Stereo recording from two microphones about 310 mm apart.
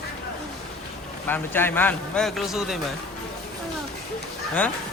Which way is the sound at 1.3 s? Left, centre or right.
Centre.